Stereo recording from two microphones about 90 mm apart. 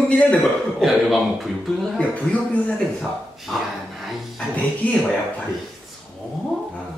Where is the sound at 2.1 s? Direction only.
15° left (ahead or behind).